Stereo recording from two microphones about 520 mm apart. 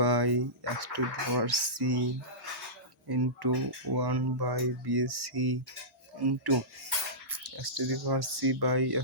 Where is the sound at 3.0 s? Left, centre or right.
Right.